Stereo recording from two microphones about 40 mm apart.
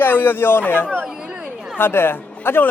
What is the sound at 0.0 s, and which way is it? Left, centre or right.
Speech, left.